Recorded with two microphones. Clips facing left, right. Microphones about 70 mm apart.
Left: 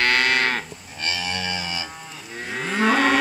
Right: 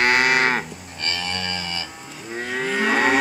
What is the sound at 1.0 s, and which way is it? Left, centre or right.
Livestock, centre.